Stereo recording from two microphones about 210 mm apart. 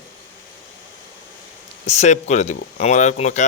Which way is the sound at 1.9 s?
35° left (ahead or behind).